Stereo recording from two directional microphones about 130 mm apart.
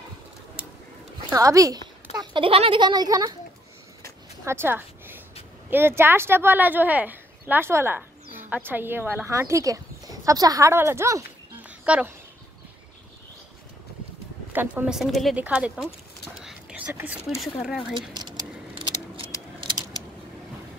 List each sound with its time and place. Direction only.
1.3 s a woman's voice: 25° right (ahead or behind)
2.1 s speech: 40° right (ahead or behind)
4.5 s a woman's voice: 15° right (ahead or behind)
11.8 s speech: 10° right (ahead or behind)
14.5 s a woman's voice: 15° right (ahead or behind); by 15.3 s centre (ahead or behind)
15.3 s speech: 10° right (ahead or behind)
16.4 s whispering: 10° right (ahead or behind)
17.4 s a woman's voice: centre (ahead or behind)
18.1 s a sound: 35° right (ahead or behind)